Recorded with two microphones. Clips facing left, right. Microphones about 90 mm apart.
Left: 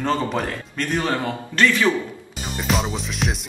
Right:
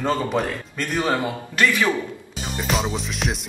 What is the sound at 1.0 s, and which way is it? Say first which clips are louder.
Speech: right 1 dB; 15° right (ahead or behind).